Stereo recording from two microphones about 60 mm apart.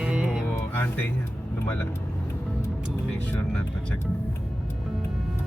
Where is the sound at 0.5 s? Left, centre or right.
Left.